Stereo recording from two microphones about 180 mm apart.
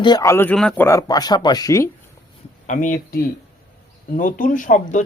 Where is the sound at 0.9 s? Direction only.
20° left (ahead or behind).